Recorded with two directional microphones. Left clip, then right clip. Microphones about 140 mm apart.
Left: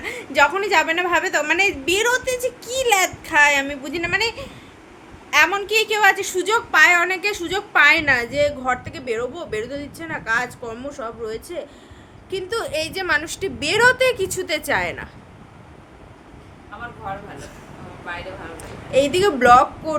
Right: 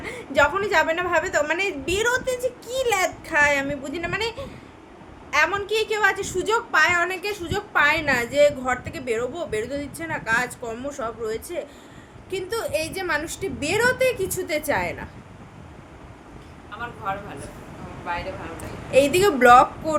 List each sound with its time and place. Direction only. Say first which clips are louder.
0.0 s a woman's voice: left 3 dB; 10° left (ahead or behind)
10.8 s a woman's voice: right 1 dB; 5° right (ahead or behind)
12.5 s a woman's voice: left 2 dB; 45° left (ahead or behind); by 15.0 s 65° left (ahead or behind)
18.1 s speech: right 2 dB; 20° right (ahead or behind)
18.9 s a woman's voice: even; centre (ahead or behind)